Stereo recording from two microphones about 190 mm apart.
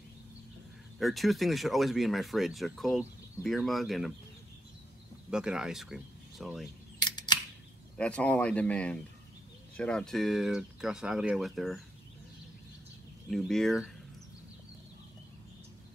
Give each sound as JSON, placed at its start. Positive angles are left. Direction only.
{"t": 0.9, "sound": "speech", "side_deg": 0}
{"t": 5.3, "sound": "speech", "side_deg": -5}
{"t": 7.0, "sound": "camera", "side_deg": 20}
{"t": 8.0, "sound": "speech", "side_deg": 5}
{"t": 13.3, "sound": "speech", "side_deg": 0}